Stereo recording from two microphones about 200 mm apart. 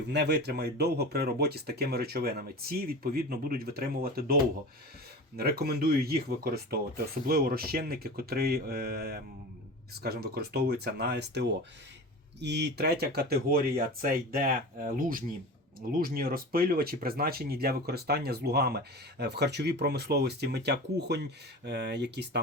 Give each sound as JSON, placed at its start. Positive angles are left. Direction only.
{"t": 0.1, "sound": "speech", "side_deg": -55}
{"t": 5.4, "sound": "speech", "side_deg": -50}